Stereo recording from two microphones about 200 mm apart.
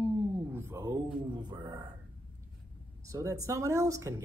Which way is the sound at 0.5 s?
15° right (ahead or behind).